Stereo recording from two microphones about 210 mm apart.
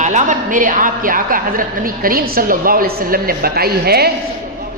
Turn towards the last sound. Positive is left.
turn(degrees=-50)  # may be behind; listen again after turning